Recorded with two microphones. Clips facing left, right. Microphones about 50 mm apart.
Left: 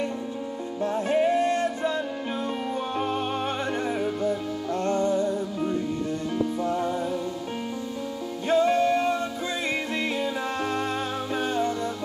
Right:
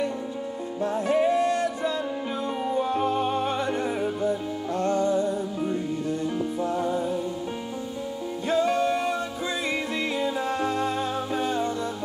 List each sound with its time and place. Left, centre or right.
1.0 s music: left
4.8 s music: left
8.5 s music: left
11.3 s music: left